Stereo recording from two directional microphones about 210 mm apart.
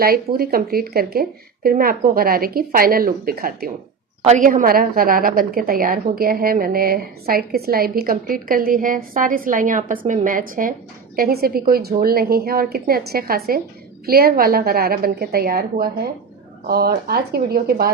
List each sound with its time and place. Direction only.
0.0 s a woman's voice: 45° right (ahead or behind)